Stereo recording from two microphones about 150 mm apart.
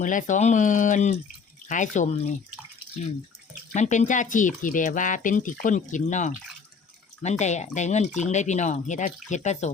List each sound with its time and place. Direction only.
0.0 s speech: 60° left (ahead or behind)
3.7 s speech: 55° left (ahead or behind)